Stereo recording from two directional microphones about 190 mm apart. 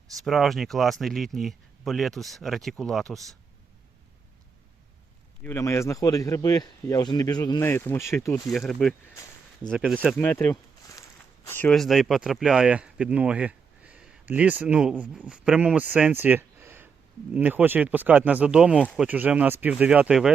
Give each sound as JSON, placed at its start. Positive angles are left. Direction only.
{"t": 0.3, "sound": "speech", "side_deg": 0}
{"t": 5.4, "sound": "speech", "side_deg": 10}
{"t": 7.6, "sound": "speech", "side_deg": 10}
{"t": 8.4, "sound": "speech", "side_deg": 0}
{"t": 10.2, "sound": "speech", "side_deg": 10}